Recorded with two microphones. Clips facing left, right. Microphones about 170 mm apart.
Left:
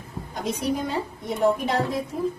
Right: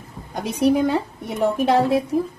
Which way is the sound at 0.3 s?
70° right (ahead or behind).